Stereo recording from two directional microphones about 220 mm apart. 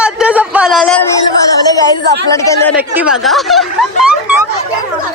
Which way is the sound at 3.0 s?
5° right (ahead or behind).